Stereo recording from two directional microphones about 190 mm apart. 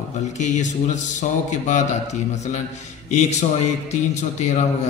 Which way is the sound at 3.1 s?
35° left (ahead or behind).